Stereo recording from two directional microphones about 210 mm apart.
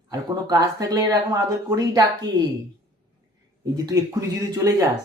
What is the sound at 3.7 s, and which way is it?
Speech, 20° right (ahead or behind).